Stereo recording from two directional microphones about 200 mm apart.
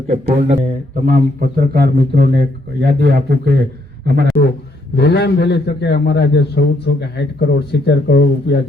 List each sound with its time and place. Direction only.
0.1 s a man's voice: 35° right (ahead or behind); by 4.4 s 55° right (ahead or behind)
4.9 s a man's voice: 55° left (ahead or behind)